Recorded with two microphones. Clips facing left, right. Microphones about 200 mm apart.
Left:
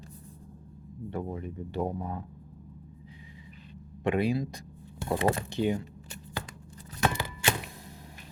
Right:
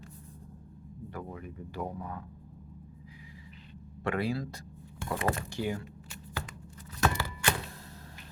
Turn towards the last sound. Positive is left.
turn(degrees=15)  # may be behind; listen again after turning